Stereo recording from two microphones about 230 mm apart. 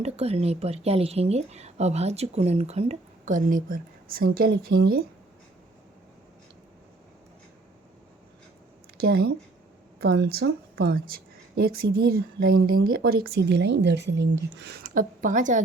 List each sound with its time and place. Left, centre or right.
0.0 s speech: right
9.0 s a woman's voice: right